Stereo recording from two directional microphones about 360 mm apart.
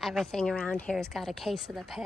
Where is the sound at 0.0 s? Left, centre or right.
Centre.